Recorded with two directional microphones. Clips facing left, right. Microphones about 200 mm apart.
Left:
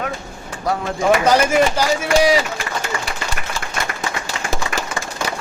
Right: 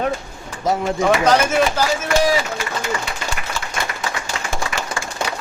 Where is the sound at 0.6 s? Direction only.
20° right (ahead or behind).